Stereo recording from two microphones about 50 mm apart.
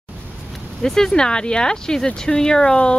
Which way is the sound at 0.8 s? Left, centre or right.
Centre.